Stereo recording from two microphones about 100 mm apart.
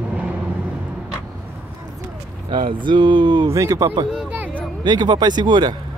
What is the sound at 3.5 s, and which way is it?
Speech, 35° right (ahead or behind).